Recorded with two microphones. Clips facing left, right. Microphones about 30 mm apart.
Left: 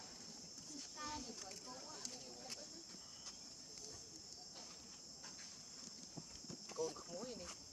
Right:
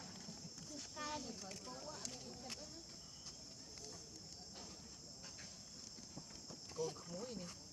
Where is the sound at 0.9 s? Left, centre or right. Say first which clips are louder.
Right 3 dB; right.